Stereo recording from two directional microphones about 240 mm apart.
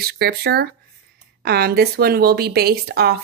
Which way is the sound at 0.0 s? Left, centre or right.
Right.